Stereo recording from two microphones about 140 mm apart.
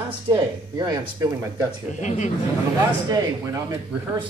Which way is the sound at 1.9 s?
60° left (ahead or behind).